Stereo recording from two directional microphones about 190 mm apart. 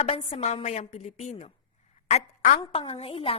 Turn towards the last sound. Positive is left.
turn(degrees=30)  # may be behind; listen again after turning